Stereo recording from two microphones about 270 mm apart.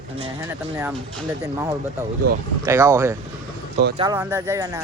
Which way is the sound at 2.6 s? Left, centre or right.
Centre.